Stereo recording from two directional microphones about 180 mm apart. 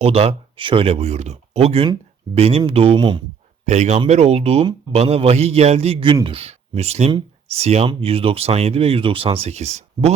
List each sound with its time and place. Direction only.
0.0 s a man's voice: 35° right (ahead or behind)
3.7 s a man's voice: 40° right (ahead or behind)